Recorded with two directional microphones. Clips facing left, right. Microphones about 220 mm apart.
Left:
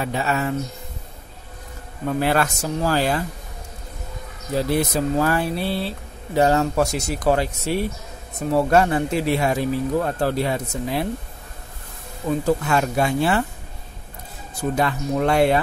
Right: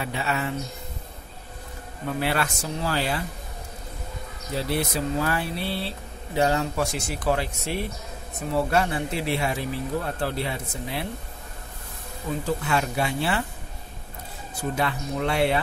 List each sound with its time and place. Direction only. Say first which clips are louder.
0.0 s speech: left 5 dB; 40° left (ahead or behind)
2.1 s speech: left 6 dB; 45° left (ahead or behind)
4.6 s speech: left 6 dB; 45° left (ahead or behind)
12.4 s speech: left 5 dB; 45° left (ahead or behind)
14.6 s speech: left 5 dB; 45° left (ahead or behind)